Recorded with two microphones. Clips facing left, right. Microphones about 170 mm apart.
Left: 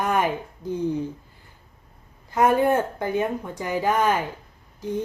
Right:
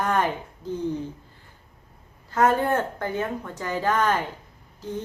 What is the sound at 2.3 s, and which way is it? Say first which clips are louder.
Speech: left 2 dB; 15° left (ahead or behind).